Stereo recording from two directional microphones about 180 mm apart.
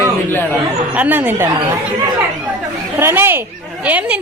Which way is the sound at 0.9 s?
10° right (ahead or behind).